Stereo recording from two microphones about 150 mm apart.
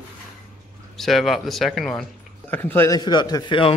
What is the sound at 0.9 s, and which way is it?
Speech, centre (ahead or behind).